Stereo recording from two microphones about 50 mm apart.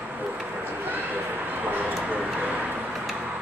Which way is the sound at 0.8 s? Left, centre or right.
Right.